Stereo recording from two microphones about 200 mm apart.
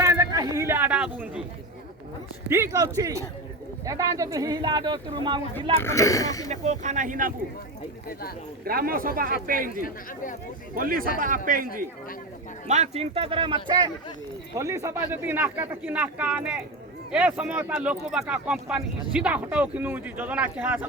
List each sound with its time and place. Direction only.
0.0 s a sound: 15° right (ahead or behind)
2.5 s speech: 15° right (ahead or behind)
5.7 s speech: 15° left (ahead or behind)
6.5 s speech: 35° right (ahead or behind)
8.6 s speech: 45° right (ahead or behind)
10.8 s speech: 45° right (ahead or behind); by 20.8 s 10° right (ahead or behind)